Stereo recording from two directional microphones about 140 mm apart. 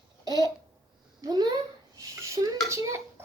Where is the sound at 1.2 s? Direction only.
30° right (ahead or behind).